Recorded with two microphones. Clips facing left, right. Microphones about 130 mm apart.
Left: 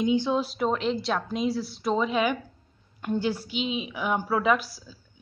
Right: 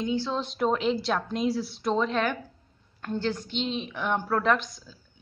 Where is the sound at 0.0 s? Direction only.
15° left (ahead or behind).